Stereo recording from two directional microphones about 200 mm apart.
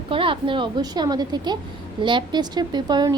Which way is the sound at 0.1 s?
25° right (ahead or behind).